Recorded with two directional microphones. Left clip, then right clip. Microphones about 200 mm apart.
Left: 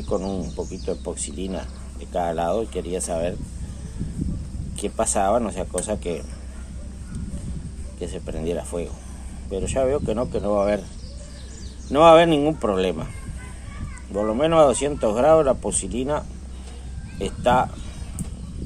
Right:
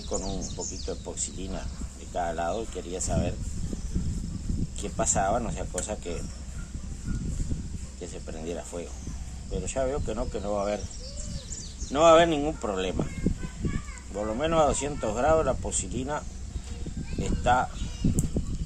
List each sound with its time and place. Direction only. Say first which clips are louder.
0.1 s speech: left 8 dB; 40° left (ahead or behind)
4.7 s speech: left 6 dB; 45° left (ahead or behind)
8.0 s speech: left 9 dB; 45° left (ahead or behind)
11.9 s speech: left 6 dB; 40° left (ahead or behind)
14.1 s speech: left 8 dB; 40° left (ahead or behind)